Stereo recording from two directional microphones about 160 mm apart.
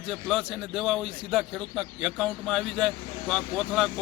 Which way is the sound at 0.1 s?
Centre (ahead or behind).